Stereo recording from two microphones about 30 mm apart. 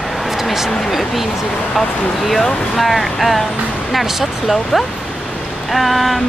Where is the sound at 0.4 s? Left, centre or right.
Centre.